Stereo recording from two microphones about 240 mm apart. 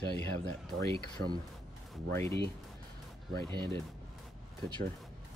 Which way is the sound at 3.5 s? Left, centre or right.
Centre.